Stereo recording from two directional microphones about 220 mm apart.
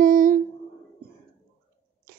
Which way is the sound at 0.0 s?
35° right (ahead or behind).